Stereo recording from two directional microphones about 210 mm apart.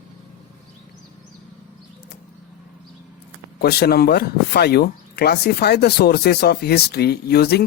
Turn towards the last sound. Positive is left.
turn(degrees=50)  # may be behind; listen again after turning